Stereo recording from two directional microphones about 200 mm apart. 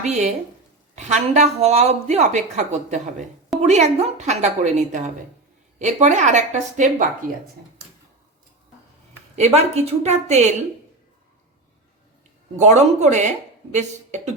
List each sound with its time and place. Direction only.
0.0 s a woman's voice: 35° right (ahead or behind)
9.3 s a woman's voice: 35° right (ahead or behind)
12.5 s a woman's voice: 35° right (ahead or behind)